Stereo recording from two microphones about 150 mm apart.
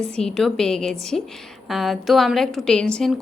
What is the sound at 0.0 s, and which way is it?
A woman's voice, 5° left (ahead or behind).